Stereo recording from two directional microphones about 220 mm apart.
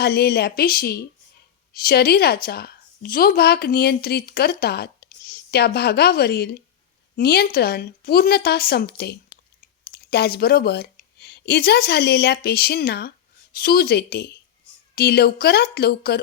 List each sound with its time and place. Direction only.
0.0 s a woman's voice: 45° left (ahead or behind)